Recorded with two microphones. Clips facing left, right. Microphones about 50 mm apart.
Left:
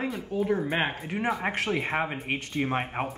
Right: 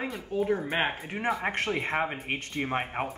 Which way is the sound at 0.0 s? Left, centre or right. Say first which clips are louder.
Left 1 dB; centre.